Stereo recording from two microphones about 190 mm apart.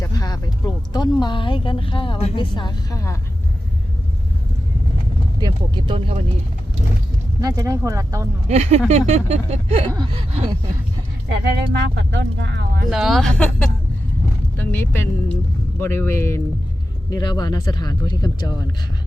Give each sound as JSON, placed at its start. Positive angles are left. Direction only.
{"t": 0.0, "sound": "speech", "side_deg": 20}
{"t": 5.4, "sound": "speech", "side_deg": -25}
{"t": 7.4, "sound": "speech", "side_deg": -20}
{"t": 8.4, "sound": "speech", "side_deg": -35}
{"t": 11.3, "sound": "speech", "side_deg": -65}
{"t": 12.9, "sound": "speech", "side_deg": 0}